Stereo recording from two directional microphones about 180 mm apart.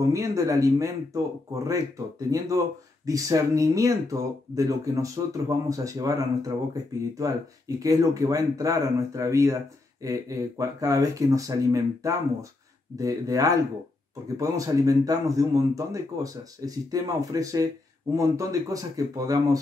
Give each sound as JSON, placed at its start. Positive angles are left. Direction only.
{"t": 0.1, "sound": "speech", "side_deg": -15}